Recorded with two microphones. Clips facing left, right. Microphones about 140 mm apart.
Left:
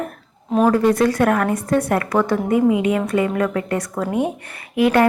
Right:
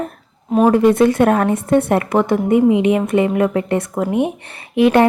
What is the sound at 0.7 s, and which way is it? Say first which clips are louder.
A woman's voice: right 4 dB; 25° right (ahead or behind).